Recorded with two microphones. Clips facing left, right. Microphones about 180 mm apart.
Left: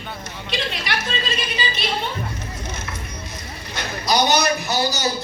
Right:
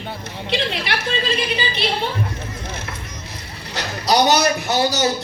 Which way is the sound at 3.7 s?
75° right (ahead or behind).